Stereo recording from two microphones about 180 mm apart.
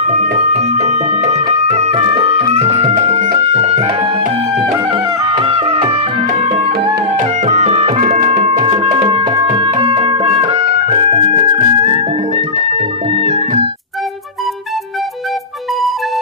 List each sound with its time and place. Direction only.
0.6 s music: 40° right (ahead or behind)
7.2 s music: 40° right (ahead or behind)
8.5 s music: 30° right (ahead or behind)